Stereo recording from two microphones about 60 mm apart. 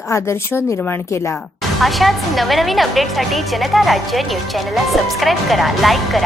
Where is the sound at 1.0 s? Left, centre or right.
Left.